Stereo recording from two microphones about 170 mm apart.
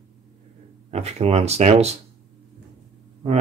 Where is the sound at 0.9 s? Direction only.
40° right (ahead or behind).